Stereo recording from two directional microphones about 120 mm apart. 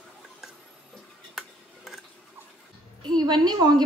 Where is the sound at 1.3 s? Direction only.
Centre (ahead or behind).